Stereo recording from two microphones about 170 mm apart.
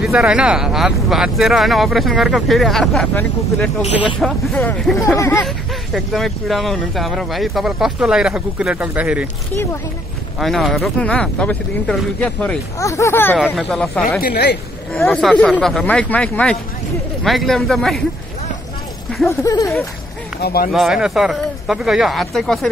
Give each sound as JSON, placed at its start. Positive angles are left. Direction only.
{"t": 0.0, "sound": "speech", "side_deg": -5}
{"t": 5.9, "sound": "speech", "side_deg": 0}
{"t": 10.4, "sound": "speech", "side_deg": 0}
{"t": 12.7, "sound": "speech", "side_deg": 15}
{"t": 13.4, "sound": "speech", "side_deg": 0}
{"t": 14.2, "sound": "speech", "side_deg": 65}
{"t": 15.0, "sound": "speech", "side_deg": 0}
{"t": 19.2, "sound": "speech", "side_deg": 20}
{"t": 20.3, "sound": "speech", "side_deg": 65}
{"t": 20.7, "sound": "speech", "side_deg": -5}